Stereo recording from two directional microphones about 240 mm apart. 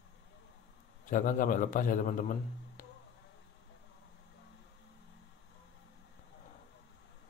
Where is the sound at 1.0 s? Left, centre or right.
Left.